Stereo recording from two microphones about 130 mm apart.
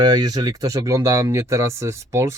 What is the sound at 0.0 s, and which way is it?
Speech, 30° right (ahead or behind).